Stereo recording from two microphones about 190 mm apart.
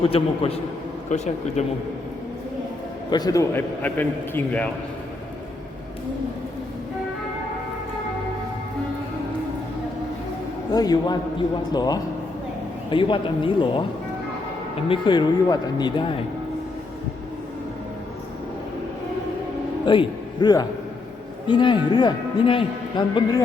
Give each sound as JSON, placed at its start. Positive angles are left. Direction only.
{"t": 0.1, "sound": "speech", "side_deg": 30}
{"t": 3.1, "sound": "a man's voice", "side_deg": 20}
{"t": 10.7, "sound": "a man's voice", "side_deg": 20}
{"t": 14.8, "sound": "a man's voice", "side_deg": 25}
{"t": 19.8, "sound": "a man's voice", "side_deg": 25}